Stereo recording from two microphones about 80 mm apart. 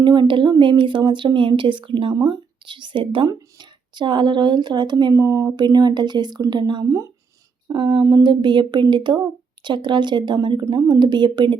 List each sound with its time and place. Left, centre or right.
0.0 s speech: right
0.6 s a woman's voice: right
3.2 s a woman's voice: right
5.1 s speech: right
5.5 s speech: right
7.7 s a sound: right
8.0 s speech: right